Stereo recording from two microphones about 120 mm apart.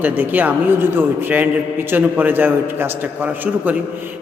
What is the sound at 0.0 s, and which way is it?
A man's voice, 15° right (ahead or behind).